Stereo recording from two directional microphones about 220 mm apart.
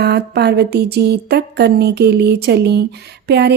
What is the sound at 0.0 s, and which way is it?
Speech, 50° right (ahead or behind).